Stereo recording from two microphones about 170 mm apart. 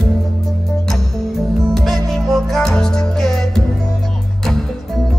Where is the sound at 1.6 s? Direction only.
Centre (ahead or behind).